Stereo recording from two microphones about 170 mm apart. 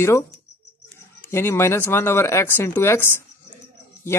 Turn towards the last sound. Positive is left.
turn(degrees=15)  # may be behind; listen again after turning